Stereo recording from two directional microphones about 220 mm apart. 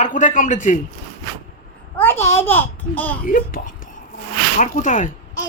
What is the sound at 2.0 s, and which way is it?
A child's voice, 10° left (ahead or behind).